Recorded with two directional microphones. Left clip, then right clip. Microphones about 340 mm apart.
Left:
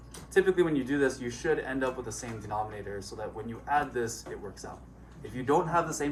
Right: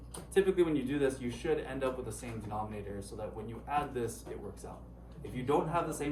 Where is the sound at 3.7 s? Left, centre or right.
Centre.